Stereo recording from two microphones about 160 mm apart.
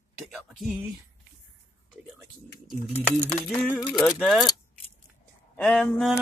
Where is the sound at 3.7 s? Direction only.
Centre (ahead or behind).